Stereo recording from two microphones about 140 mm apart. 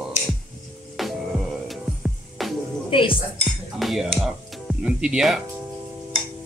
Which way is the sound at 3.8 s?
Centre (ahead or behind).